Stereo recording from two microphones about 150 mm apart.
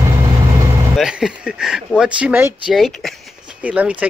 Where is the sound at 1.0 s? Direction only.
5° right (ahead or behind).